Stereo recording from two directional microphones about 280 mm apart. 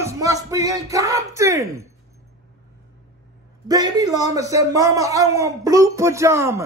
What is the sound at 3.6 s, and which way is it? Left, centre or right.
A man's voice, centre.